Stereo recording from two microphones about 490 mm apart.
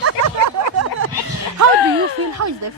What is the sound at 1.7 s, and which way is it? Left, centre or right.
Speech, left.